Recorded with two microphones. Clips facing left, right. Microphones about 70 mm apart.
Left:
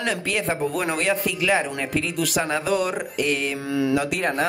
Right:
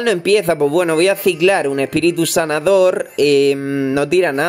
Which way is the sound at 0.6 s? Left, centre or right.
Right.